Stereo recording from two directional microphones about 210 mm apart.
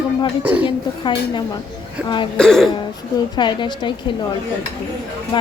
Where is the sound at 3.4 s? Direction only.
20° left (ahead or behind).